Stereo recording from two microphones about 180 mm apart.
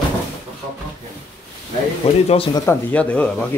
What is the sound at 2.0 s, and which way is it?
Speech, 35° left (ahead or behind).